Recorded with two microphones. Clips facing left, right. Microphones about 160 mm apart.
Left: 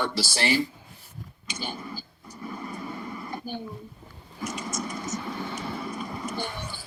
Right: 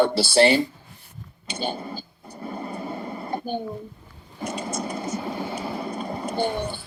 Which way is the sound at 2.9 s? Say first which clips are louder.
Right 4 dB; 40° right (ahead or behind).